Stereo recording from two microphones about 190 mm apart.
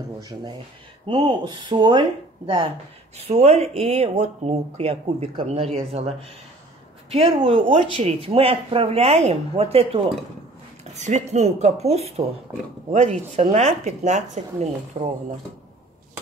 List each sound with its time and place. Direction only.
0.2 s speech: 25° right (ahead or behind)
7.4 s speech: 30° right (ahead or behind)
12.5 s speech: 15° right (ahead or behind)
12.9 s speech: 35° right (ahead or behind)